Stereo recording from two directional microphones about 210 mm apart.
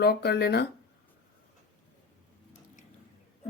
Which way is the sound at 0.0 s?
50° left (ahead or behind).